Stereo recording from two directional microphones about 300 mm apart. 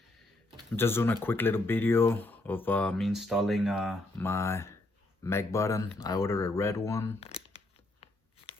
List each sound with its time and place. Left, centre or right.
0.8 s speech: centre
7.2 s speech: centre
8.0 s a sound: centre